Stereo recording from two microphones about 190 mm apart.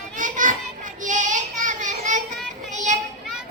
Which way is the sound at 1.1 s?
40° right (ahead or behind).